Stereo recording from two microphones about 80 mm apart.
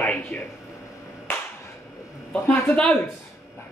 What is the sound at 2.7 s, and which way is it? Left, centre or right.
Speech, centre.